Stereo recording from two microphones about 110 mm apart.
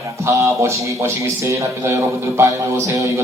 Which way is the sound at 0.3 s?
25° right (ahead or behind).